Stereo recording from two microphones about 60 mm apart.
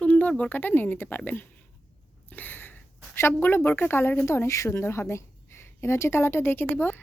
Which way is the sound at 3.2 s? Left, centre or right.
Left.